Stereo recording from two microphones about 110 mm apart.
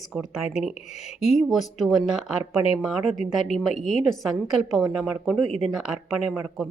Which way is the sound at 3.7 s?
90° left.